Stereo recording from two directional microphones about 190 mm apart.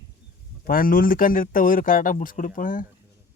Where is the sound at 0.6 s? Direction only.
50° left (ahead or behind).